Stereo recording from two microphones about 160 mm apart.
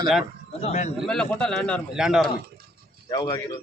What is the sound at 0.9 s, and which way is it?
A man's voice, 5° left (ahead or behind).